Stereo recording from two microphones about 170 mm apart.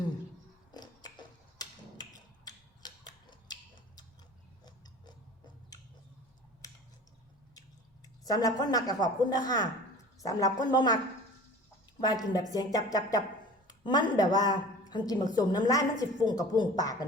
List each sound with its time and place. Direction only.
0.7 s a sound: 25° left (ahead or behind)
8.2 s a woman's voice: 20° left (ahead or behind)
11.9 s a woman's voice: 25° left (ahead or behind)